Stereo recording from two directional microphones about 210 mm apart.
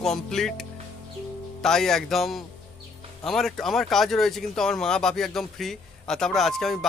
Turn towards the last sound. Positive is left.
turn(degrees=0)  # may be behind; listen again after turning